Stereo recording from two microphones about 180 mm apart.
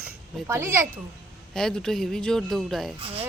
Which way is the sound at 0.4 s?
15° right (ahead or behind).